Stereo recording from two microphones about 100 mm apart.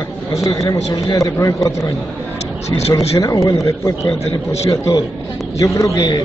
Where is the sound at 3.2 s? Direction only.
35° left (ahead or behind).